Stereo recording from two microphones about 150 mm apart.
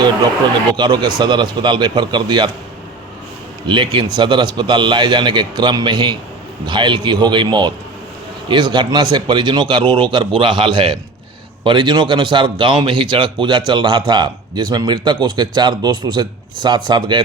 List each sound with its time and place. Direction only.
0.8 s a man's voice: 30° right (ahead or behind)
3.7 s a man's voice: 30° right (ahead or behind)